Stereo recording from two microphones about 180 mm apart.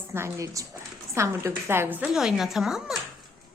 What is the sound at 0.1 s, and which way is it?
A woman's voice, 15° right (ahead or behind).